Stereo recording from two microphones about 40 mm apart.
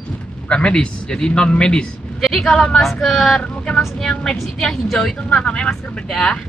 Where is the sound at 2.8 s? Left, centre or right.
Centre.